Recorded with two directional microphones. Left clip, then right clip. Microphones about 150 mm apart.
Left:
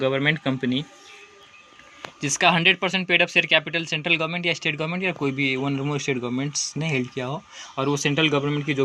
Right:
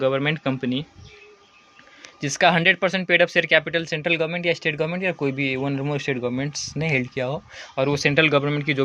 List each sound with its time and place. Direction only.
0.0 s speech: 15° right (ahead or behind)
2.2 s speech: 30° right (ahead or behind)